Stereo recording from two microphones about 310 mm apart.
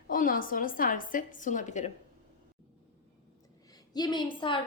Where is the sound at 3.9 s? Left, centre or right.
Centre.